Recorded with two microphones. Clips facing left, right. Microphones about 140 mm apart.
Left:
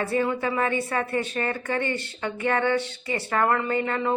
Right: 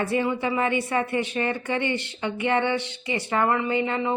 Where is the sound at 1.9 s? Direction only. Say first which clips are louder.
Right 2 dB; 20° right (ahead or behind).